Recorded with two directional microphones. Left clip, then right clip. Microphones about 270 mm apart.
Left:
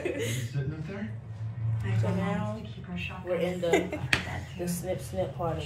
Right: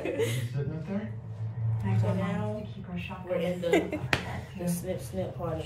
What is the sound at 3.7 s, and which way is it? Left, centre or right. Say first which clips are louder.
Speech: even; centre.